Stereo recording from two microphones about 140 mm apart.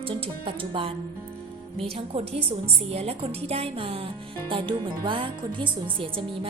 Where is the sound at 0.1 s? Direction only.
40° right (ahead or behind).